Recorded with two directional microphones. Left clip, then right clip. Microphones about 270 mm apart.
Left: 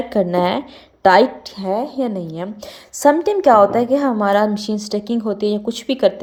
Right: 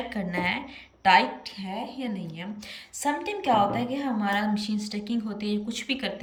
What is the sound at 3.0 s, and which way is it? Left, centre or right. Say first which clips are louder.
A woman's voice: left 14 dB; centre.